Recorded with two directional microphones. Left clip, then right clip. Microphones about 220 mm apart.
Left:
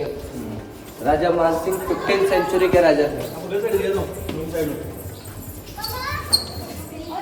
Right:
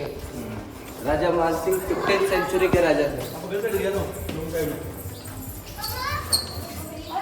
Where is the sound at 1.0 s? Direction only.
10° right (ahead or behind).